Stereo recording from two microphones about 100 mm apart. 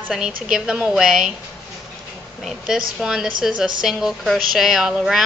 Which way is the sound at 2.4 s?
5° right (ahead or behind).